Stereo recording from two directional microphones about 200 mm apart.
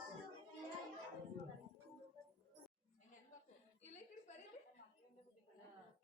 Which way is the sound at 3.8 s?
35° left (ahead or behind).